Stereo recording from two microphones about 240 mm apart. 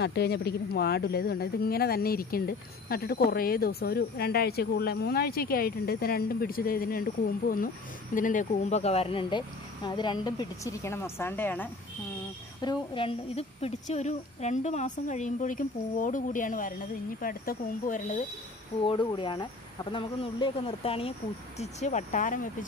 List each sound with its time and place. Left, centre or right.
0.0 s speech: left; by 11.7 s centre
12.6 s a woman's voice: left
18.8 s a woman's voice: centre